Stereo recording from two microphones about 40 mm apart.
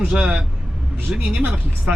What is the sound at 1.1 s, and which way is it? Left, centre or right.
Speech, right.